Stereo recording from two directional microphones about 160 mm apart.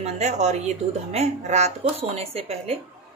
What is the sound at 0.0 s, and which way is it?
A woman's voice, 45° right (ahead or behind).